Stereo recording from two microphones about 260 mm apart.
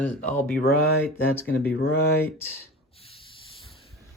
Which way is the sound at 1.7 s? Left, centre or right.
Left.